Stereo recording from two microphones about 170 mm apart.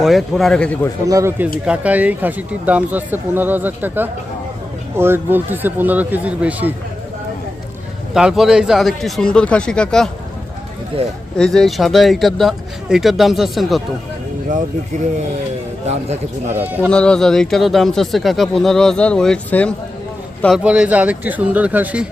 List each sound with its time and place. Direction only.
0.0 s speech: centre (ahead or behind)
1.0 s speech: 20° right (ahead or behind)
1.6 s speech: 5° right (ahead or behind)
8.1 s speech: 5° right (ahead or behind)
10.9 s speech: 35° right (ahead or behind)
11.3 s speech: 5° left (ahead or behind)
16.5 s speech: 10° right (ahead or behind)
16.9 s speech: 5° left (ahead or behind)
20.7 s speech: 5° right (ahead or behind)